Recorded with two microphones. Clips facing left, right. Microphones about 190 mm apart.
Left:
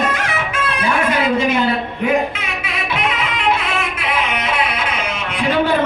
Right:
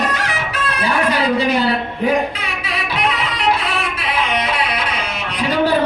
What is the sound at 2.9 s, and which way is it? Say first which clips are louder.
Music: even; 35° right (ahead or behind).